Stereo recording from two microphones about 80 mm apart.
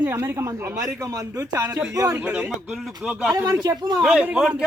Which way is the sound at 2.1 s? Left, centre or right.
Right.